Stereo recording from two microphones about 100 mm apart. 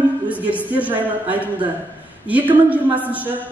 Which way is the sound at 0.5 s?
15° right (ahead or behind).